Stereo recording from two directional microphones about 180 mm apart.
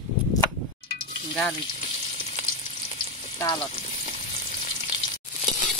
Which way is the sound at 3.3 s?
20° left (ahead or behind).